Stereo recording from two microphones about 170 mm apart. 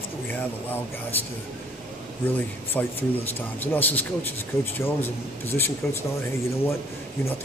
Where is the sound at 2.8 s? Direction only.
10° left (ahead or behind).